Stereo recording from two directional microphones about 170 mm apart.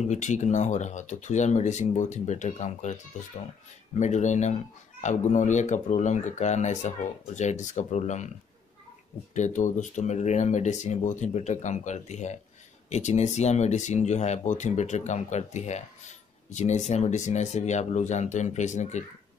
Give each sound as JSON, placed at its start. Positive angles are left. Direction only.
{"t": 0.0, "sound": "speech", "side_deg": 45}
{"t": 9.3, "sound": "speech", "side_deg": 45}